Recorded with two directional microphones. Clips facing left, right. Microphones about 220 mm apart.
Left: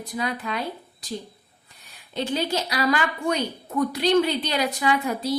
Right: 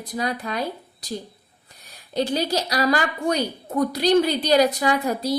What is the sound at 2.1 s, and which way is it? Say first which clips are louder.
Speech: right 3 dB; 40° right (ahead or behind).